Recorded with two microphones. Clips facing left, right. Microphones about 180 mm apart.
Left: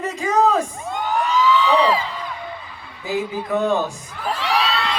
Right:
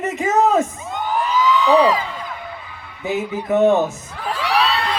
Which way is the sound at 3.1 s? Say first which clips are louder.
Right 2 dB; 20° right (ahead or behind).